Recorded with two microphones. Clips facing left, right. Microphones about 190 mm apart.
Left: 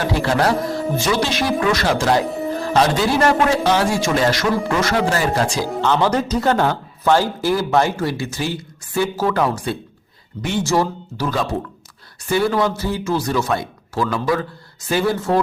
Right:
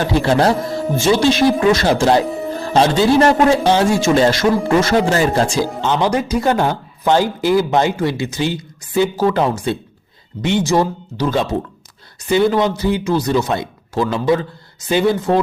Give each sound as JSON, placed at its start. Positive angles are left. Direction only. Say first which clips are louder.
{"t": 0.2, "sound": "speech", "louder": "right 4 dB", "side_deg": -30}
{"t": 2.2, "sound": "music", "louder": "right 1 dB", "side_deg": 0}
{"t": 2.7, "sound": "speech", "louder": "right 5 dB", "side_deg": -25}
{"t": 5.9, "sound": "speech", "louder": "even", "side_deg": -15}